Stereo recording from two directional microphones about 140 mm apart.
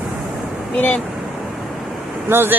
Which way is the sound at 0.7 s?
10° left (ahead or behind).